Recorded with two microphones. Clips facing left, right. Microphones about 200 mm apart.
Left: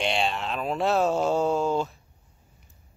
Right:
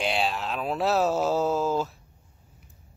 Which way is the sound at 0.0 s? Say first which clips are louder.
Even; centre (ahead or behind).